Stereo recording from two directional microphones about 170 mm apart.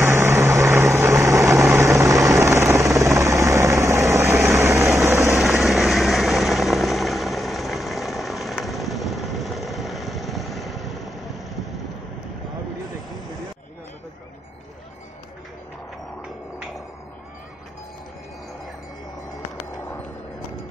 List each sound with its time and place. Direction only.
0.0 s vehicle: 15° right (ahead or behind)
2.3 s helicopter: 20° right (ahead or behind)
4.3 s vehicle: centre (ahead or behind)
4.6 s vehicle: 20° right (ahead or behind)
4.8 s vehicle: centre (ahead or behind)